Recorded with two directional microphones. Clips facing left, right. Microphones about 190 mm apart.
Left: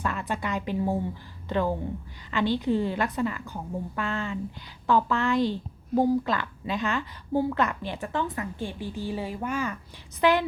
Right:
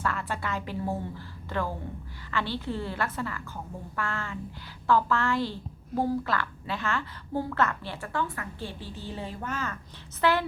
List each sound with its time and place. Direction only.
0.0 s a woman's voice: 20° left (ahead or behind)